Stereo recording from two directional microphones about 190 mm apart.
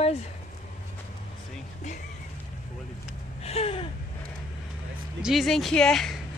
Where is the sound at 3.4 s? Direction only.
30° left (ahead or behind).